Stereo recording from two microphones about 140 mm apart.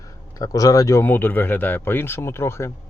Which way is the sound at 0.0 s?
25° left (ahead or behind).